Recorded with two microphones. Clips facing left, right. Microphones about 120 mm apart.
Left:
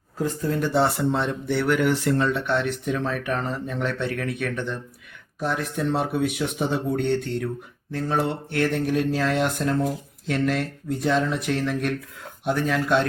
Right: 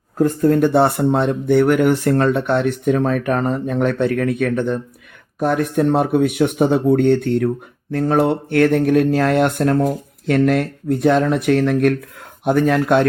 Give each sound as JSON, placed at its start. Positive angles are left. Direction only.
{"t": 0.2, "sound": "speech", "side_deg": -55}